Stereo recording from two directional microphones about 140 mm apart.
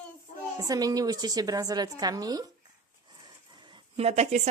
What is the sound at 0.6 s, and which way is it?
A woman's voice, 25° right (ahead or behind).